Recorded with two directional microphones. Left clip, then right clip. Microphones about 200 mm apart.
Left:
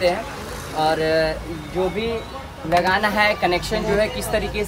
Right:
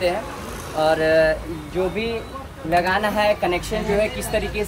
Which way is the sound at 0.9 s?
5° left (ahead or behind).